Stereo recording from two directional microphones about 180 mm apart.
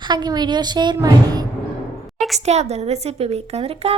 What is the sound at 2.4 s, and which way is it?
A woman's voice, 35° right (ahead or behind).